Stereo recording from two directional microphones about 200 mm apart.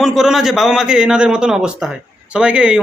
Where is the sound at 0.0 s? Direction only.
Centre (ahead or behind).